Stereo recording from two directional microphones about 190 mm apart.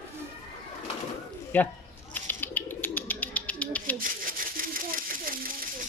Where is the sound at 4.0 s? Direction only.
45° right (ahead or behind).